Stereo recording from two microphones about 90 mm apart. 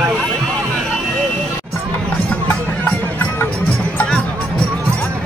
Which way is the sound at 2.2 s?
15° left (ahead or behind).